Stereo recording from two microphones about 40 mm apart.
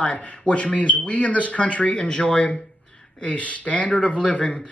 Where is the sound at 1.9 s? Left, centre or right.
Left.